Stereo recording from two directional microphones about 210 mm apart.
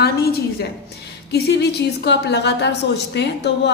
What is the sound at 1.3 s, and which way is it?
A woman's voice, 50° left (ahead or behind).